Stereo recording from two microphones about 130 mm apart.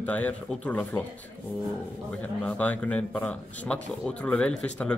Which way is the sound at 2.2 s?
10° left (ahead or behind).